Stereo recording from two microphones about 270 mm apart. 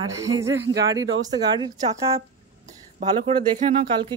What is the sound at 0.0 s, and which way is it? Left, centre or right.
Speech, centre.